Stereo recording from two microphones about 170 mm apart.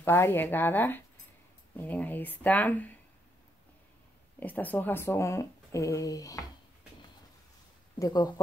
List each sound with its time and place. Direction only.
0.0 s speech: 10° left (ahead or behind)
4.4 s speech: 10° left (ahead or behind)
8.0 s speech: 25° left (ahead or behind)